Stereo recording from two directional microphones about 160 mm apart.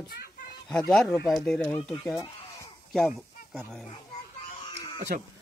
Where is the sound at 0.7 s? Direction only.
5° left (ahead or behind).